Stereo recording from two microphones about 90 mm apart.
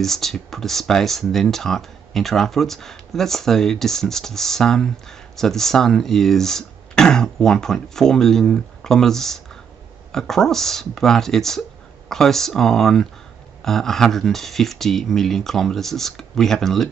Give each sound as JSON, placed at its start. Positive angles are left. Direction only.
{"t": 0.0, "sound": "speech", "side_deg": 5}